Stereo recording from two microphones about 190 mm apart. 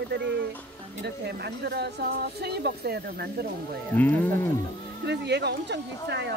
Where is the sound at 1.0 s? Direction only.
60° right (ahead or behind).